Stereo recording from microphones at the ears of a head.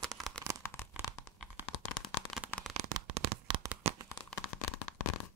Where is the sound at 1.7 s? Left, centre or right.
Left.